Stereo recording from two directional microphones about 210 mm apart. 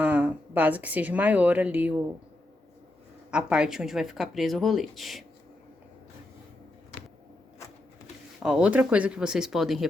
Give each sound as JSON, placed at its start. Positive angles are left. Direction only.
{"t": 0.0, "sound": "speech", "side_deg": -5}
{"t": 3.3, "sound": "speech", "side_deg": -5}
{"t": 8.4, "sound": "speech", "side_deg": -5}